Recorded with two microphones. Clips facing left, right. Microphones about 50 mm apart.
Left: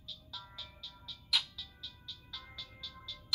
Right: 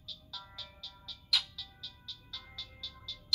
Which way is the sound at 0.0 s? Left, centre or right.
Centre.